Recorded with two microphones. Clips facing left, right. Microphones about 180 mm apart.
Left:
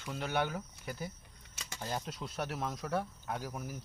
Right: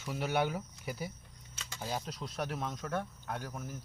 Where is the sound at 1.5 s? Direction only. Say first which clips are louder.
Left 1 dB; 10° left (ahead or behind).